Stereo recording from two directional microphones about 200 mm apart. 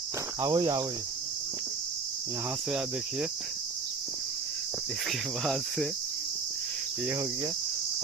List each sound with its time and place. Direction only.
0.4 s cricket: 15° right (ahead or behind)
5.4 s cricket: centre (ahead or behind)